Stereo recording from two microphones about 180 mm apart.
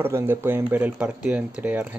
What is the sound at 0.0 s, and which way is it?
Speech, 10° right (ahead or behind).